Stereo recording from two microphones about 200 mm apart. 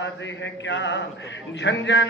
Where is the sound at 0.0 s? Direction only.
65° left (ahead or behind).